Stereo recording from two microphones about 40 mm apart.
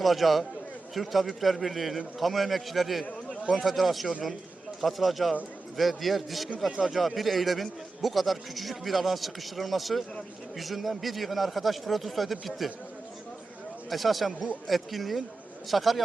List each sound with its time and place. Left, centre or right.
0.0 s a man's voice: centre
6.7 s speech: centre
6.9 s a man's voice: centre
13.9 s a man's voice: centre